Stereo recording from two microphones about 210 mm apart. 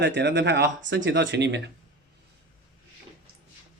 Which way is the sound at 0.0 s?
55° right (ahead or behind).